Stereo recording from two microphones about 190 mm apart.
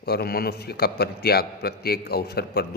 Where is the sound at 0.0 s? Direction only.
55° left (ahead or behind).